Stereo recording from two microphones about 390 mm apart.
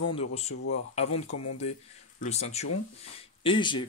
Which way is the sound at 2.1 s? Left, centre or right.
Centre.